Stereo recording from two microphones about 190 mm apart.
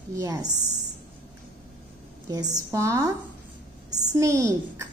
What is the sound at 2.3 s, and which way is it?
A woman's voice, 20° right (ahead or behind).